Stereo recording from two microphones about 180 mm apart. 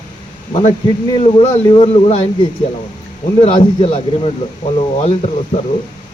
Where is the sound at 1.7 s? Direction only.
30° left (ahead or behind).